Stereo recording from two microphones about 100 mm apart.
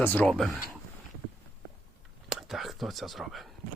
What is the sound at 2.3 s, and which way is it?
Whispering, centre (ahead or behind).